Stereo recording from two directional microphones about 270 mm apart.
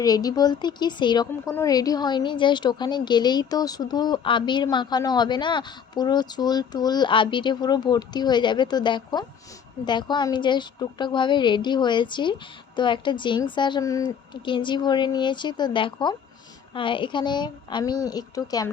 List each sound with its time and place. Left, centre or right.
0.0 s speech: centre